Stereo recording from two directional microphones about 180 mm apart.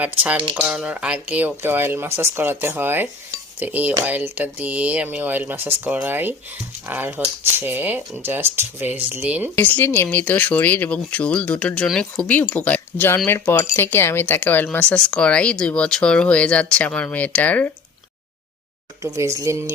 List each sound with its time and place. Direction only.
0.5 s speech: 5° right (ahead or behind)
9.6 s speech: 10° left (ahead or behind)
19.0 s speech: 20° right (ahead or behind)